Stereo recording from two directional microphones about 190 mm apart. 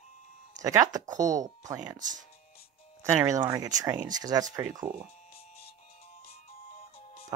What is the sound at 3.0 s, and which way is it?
Speech, 15° right (ahead or behind).